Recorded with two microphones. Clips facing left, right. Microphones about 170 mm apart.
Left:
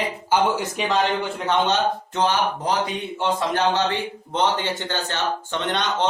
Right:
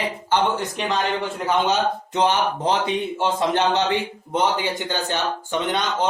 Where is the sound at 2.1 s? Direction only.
20° right (ahead or behind).